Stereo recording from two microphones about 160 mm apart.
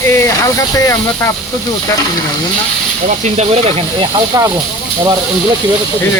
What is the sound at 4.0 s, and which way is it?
Speech, 25° right (ahead or behind).